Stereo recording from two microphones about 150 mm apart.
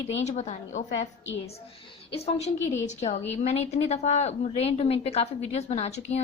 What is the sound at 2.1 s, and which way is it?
A woman's voice, 45° left (ahead or behind).